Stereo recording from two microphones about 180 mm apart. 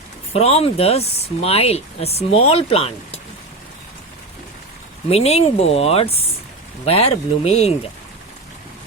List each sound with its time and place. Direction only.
0.3 s speech: 35° left (ahead or behind)
5.0 s speech: 35° left (ahead or behind)